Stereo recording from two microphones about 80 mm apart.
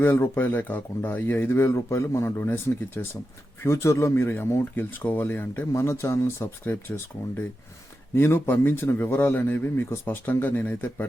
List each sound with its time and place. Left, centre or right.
0.0 s speech: left